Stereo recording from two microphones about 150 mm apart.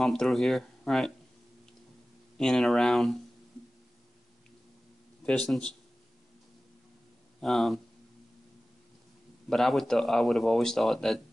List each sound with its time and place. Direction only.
0.0 s speech: centre (ahead or behind)
2.3 s speech: centre (ahead or behind)
5.2 s speech: 5° left (ahead or behind)
7.3 s speech: centre (ahead or behind)
9.5 s speech: centre (ahead or behind)